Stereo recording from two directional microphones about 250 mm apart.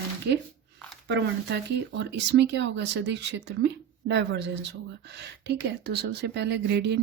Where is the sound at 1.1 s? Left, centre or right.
Right.